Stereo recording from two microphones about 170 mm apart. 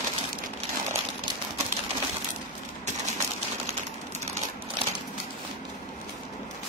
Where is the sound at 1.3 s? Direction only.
25° right (ahead or behind).